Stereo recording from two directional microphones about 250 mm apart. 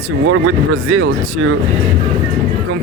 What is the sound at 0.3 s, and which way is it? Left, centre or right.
Speech, right.